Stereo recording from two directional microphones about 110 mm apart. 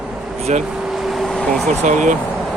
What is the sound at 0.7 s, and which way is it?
Vehicle, 5° right (ahead or behind).